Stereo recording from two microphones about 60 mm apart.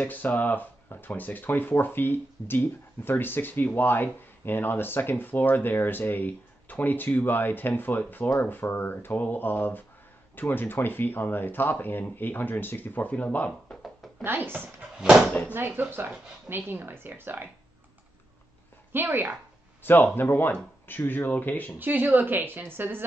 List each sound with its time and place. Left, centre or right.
0.0 s speech: left
14.2 s speech: right
15.0 s speech: centre
15.5 s speech: right
18.9 s a woman's voice: right
19.8 s speech: left
21.7 s speech: right